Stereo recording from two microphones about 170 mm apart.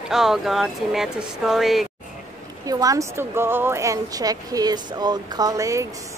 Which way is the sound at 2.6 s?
20° right (ahead or behind).